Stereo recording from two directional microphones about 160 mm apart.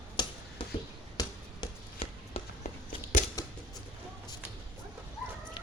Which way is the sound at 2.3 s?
45° left (ahead or behind).